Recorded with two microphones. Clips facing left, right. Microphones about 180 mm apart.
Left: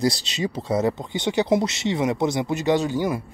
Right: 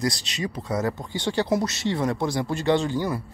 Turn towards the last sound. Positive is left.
turn(degrees=15)  # may be behind; listen again after turning